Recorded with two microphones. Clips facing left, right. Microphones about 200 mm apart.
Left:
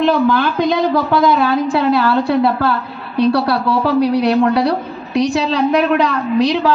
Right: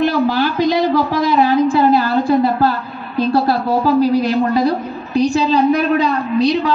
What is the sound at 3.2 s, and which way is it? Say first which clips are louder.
A woman's voice: left 1 dB; 75° left (ahead or behind).